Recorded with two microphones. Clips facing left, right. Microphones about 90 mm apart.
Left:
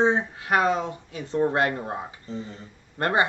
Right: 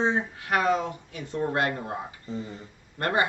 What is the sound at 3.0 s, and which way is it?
Speech, 25° left (ahead or behind).